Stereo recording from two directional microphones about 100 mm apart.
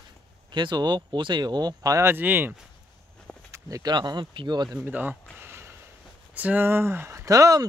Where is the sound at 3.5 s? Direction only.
35° right (ahead or behind).